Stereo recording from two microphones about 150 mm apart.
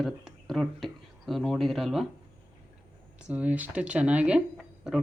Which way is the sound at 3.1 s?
10° right (ahead or behind).